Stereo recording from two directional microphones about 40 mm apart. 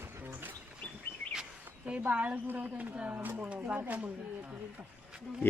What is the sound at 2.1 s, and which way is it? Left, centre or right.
Speech, right.